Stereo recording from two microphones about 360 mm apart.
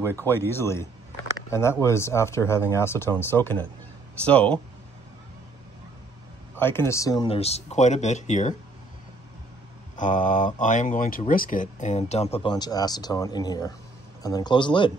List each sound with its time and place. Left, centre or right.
0.2 s speech: centre
6.5 s speech: centre
9.9 s speech: left